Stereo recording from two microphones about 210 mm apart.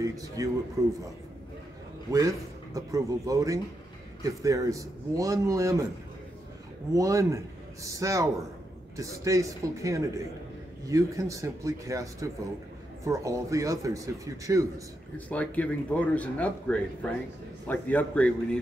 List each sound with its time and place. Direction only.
0.0 s a man's voice: 15° right (ahead or behind)
2.0 s a man's voice: 15° right (ahead or behind)
7.0 s a man's voice: 15° right (ahead or behind)
15.1 s speech: 5° left (ahead or behind)